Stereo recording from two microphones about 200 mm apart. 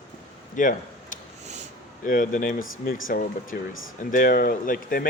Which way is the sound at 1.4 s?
35° right (ahead or behind).